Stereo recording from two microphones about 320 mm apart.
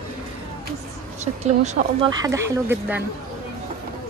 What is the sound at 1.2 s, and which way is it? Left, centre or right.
Speech, right.